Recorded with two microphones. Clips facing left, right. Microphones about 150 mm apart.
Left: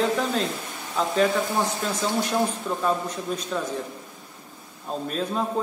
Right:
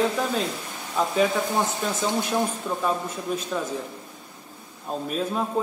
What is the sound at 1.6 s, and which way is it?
Speech, 20° right (ahead or behind).